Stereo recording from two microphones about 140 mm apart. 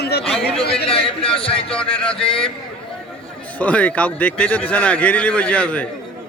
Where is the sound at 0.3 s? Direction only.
5° left (ahead or behind).